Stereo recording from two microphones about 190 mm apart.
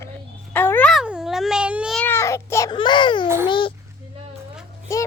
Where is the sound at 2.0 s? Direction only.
15° left (ahead or behind).